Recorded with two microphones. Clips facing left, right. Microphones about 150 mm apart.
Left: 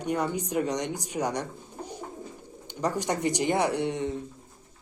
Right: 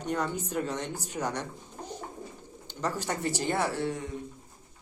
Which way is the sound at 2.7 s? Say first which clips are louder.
Left 4 dB; 15° left (ahead or behind).